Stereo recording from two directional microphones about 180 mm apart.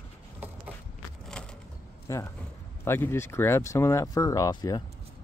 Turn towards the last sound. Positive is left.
turn(degrees=20)  # may be behind; listen again after turning